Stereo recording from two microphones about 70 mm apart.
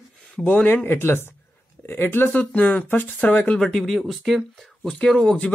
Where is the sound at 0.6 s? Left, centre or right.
Left.